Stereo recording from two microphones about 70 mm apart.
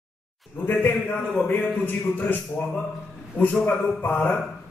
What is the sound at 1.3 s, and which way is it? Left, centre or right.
Speech, left.